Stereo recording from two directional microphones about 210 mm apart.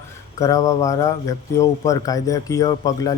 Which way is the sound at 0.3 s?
15° left (ahead or behind).